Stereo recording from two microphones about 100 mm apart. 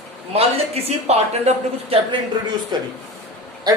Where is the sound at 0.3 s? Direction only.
85° right.